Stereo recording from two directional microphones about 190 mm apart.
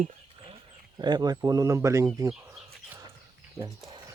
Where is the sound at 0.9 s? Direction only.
20° right (ahead or behind).